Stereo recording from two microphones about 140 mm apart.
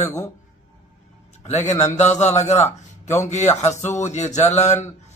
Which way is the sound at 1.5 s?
55° left (ahead or behind).